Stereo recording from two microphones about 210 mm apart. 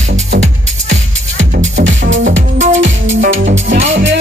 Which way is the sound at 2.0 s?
60° right (ahead or behind).